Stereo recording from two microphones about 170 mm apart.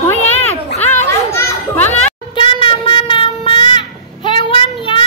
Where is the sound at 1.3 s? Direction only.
10° left (ahead or behind).